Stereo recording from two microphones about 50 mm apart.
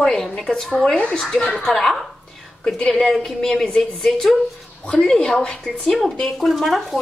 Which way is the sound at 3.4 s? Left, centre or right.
Centre.